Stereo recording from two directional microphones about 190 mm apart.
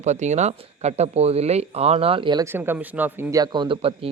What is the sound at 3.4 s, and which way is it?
Speech, 25° right (ahead or behind).